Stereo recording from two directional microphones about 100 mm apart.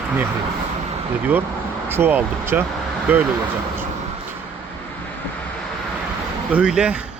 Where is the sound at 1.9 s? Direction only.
20° right (ahead or behind).